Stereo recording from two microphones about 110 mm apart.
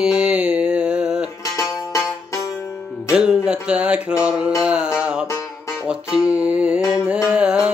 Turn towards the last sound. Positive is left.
turn(degrees=-10)  # may be behind; listen again after turning